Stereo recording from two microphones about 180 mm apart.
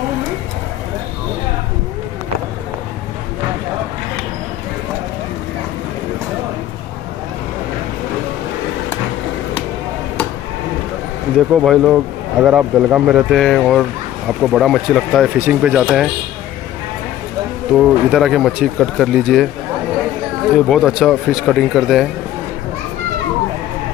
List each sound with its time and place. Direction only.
11.6 s speech: centre (ahead or behind)
17.7 s speech: centre (ahead or behind)
20.5 s speech: centre (ahead or behind)